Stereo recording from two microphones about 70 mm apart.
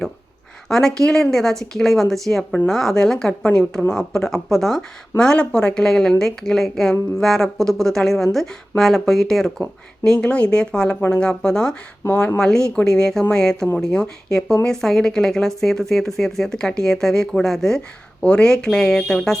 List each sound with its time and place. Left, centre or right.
0.7 s speech: centre
12.0 s speech: left
12.4 s speech: centre